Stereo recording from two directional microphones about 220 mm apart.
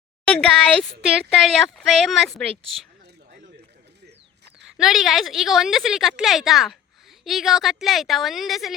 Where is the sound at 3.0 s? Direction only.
45° right (ahead or behind).